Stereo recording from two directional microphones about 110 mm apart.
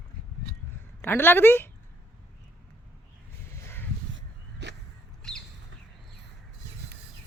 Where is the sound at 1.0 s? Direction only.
20° left (ahead or behind).